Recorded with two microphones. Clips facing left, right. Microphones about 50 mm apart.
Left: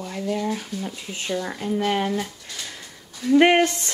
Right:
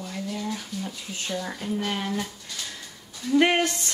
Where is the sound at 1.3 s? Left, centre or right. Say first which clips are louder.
Left 4 dB; centre.